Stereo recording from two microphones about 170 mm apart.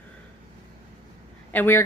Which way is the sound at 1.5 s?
10° left (ahead or behind).